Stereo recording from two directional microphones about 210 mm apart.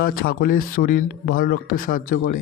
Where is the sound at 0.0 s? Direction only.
45° left (ahead or behind).